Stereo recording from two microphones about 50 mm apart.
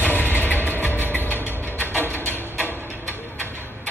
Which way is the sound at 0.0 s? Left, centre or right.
Left.